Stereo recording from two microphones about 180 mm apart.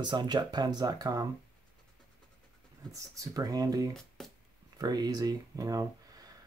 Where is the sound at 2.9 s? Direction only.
20° right (ahead or behind).